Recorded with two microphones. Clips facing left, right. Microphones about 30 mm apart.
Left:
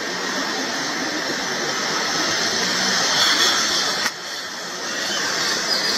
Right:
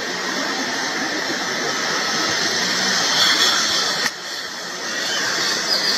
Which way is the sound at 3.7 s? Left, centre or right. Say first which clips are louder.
Right 1 dB; right.